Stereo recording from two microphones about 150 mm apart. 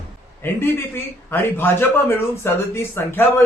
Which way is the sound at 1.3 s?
15° left (ahead or behind).